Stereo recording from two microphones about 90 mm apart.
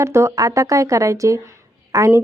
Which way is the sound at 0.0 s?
30° right (ahead or behind).